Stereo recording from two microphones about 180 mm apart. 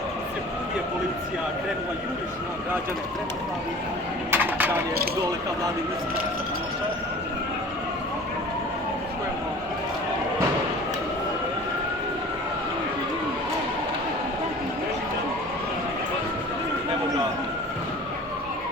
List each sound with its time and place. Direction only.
4.3 s speech: 10° right (ahead or behind)